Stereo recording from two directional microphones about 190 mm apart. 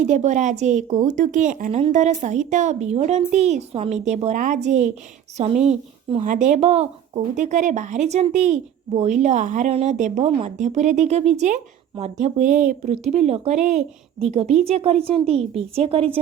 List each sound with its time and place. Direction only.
0.0 s speech: 40° right (ahead or behind)